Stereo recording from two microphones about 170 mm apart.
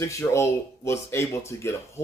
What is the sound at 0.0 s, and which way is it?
A man's voice, 15° left (ahead or behind).